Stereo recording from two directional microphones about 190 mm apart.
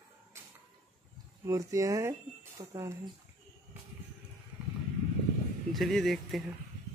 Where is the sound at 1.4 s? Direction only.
15° right (ahead or behind).